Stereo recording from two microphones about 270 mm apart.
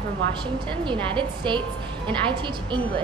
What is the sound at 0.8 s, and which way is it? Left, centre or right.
A woman's voice, centre.